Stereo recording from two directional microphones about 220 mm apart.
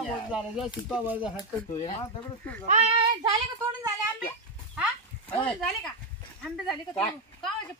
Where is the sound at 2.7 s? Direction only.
30° right (ahead or behind).